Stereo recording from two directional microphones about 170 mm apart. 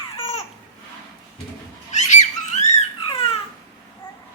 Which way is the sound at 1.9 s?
45° left (ahead or behind).